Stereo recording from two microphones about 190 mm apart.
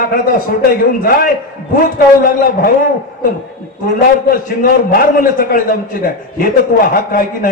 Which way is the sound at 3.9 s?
50° left (ahead or behind).